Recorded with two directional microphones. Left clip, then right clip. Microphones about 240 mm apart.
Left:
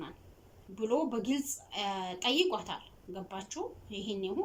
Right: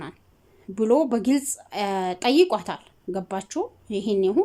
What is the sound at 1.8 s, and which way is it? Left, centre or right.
Speech, right.